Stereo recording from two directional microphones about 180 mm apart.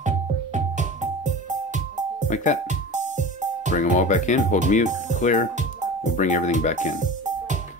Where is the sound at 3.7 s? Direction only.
45° left (ahead or behind).